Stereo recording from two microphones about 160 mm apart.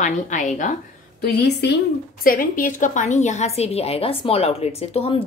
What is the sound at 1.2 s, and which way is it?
Speech, 90° left.